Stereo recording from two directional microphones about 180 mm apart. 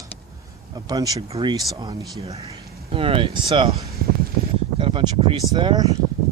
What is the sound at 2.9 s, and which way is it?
Speech, 30° right (ahead or behind).